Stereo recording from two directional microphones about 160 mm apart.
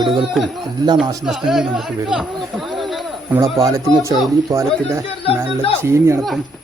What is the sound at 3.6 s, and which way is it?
Speech, 20° right (ahead or behind).